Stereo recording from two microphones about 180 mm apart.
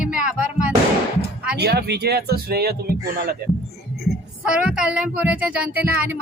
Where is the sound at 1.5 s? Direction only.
65° right (ahead or behind).